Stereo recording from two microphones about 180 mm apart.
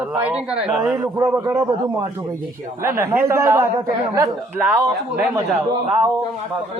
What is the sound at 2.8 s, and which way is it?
A man's voice, 15° right (ahead or behind).